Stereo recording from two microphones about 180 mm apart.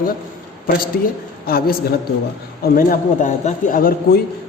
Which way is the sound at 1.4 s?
55° left (ahead or behind).